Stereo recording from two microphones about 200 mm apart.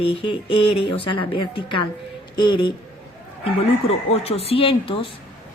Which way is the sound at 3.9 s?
30° left (ahead or behind).